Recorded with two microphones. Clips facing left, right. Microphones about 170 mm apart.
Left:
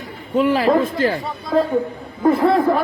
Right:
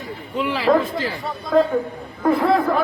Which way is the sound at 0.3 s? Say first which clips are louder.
Left 3 dB; 45° left (ahead or behind).